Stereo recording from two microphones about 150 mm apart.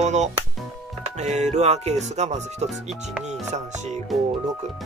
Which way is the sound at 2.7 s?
Centre (ahead or behind).